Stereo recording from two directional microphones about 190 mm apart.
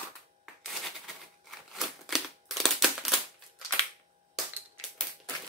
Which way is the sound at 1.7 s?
Centre (ahead or behind).